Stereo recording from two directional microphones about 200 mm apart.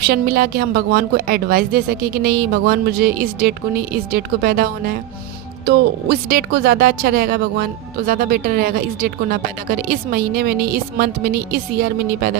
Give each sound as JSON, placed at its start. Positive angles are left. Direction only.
{"t": 0.0, "sound": "speech", "side_deg": -50}